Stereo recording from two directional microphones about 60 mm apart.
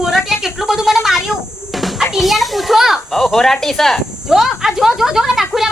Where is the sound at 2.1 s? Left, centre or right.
Centre.